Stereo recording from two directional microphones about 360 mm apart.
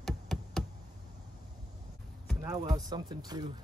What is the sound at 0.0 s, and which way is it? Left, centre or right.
Knock, centre.